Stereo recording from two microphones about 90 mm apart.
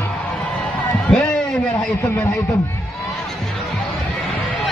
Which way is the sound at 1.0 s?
10° left (ahead or behind).